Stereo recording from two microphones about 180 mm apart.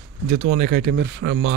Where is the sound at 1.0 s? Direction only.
85° right.